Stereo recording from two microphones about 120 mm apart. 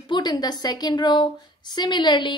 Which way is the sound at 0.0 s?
35° left (ahead or behind).